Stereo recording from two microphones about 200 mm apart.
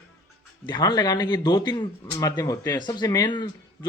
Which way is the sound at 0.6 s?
20° left (ahead or behind).